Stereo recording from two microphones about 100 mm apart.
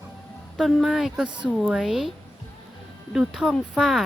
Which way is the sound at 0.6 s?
Centre (ahead or behind).